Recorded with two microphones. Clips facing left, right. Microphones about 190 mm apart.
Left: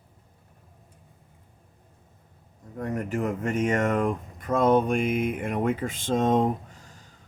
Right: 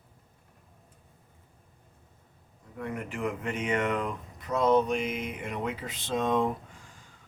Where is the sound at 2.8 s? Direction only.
45° left (ahead or behind).